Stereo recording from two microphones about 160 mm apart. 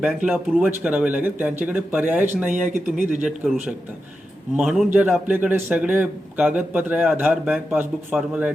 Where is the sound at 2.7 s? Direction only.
55° right (ahead or behind).